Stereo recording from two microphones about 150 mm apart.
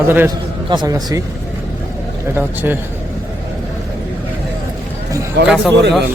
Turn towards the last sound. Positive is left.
turn(degrees=0)  # may be behind; listen again after turning